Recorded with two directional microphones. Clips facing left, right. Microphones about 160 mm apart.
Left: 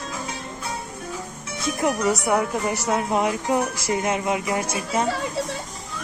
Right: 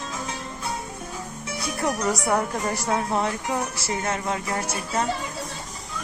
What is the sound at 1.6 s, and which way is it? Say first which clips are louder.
Speech: left 4 dB; 15° left (ahead or behind).